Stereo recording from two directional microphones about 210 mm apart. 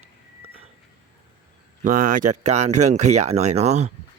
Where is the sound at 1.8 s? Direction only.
35° right (ahead or behind).